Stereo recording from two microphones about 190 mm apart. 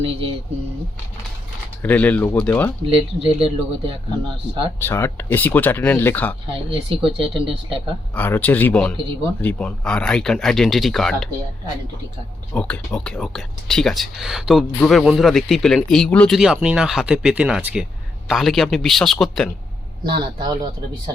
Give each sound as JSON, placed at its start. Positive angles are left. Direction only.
{"t": 0.0, "sound": "speech", "side_deg": -30}
{"t": 1.8, "sound": "speech", "side_deg": 10}
{"t": 3.2, "sound": "speech", "side_deg": -30}
{"t": 4.8, "sound": "speech", "side_deg": 10}
{"t": 6.5, "sound": "speech", "side_deg": -30}
{"t": 8.1, "sound": "speech", "side_deg": 10}
{"t": 12.5, "sound": "speech", "side_deg": 5}
{"t": 20.1, "sound": "speech", "side_deg": -25}